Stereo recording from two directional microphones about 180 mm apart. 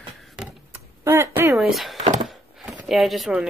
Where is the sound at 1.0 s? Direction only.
10° right (ahead or behind).